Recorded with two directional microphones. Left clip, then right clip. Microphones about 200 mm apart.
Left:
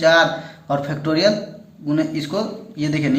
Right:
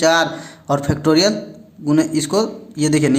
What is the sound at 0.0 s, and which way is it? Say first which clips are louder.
A man's voice: left 1 dB; 40° right (ahead or behind).